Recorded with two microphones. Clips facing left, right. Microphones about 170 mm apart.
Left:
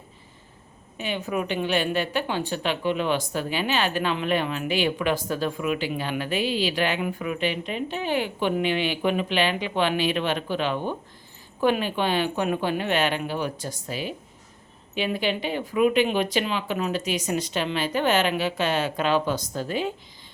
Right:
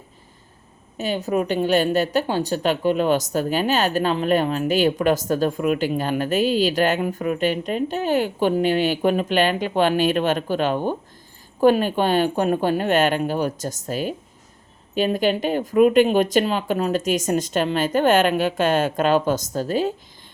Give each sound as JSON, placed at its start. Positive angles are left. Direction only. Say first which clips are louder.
{"t": 0.9, "sound": "a woman's voice", "louder": "right 6 dB", "side_deg": -40}